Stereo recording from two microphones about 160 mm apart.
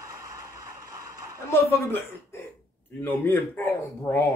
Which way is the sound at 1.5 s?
15° left (ahead or behind).